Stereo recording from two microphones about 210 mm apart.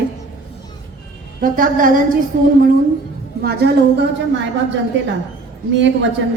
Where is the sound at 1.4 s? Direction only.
40° right (ahead or behind).